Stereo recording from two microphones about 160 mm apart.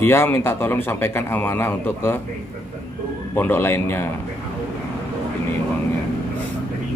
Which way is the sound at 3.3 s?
15° left (ahead or behind).